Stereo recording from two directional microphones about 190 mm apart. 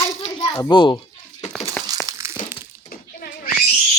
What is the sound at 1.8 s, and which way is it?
Crumpling, 20° right (ahead or behind).